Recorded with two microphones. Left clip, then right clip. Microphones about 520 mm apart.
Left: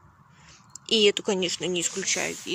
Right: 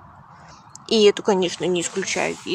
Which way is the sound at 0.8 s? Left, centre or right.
Right.